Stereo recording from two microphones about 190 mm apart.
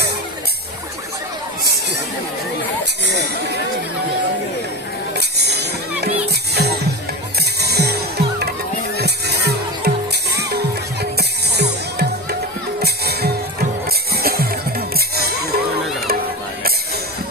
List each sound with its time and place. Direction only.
3.0 s speech: 60° right (ahead or behind)
5.1 s music: 60° right (ahead or behind)